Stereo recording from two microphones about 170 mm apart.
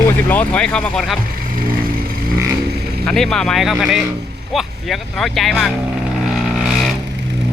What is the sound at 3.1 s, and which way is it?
Speech, 5° left (ahead or behind).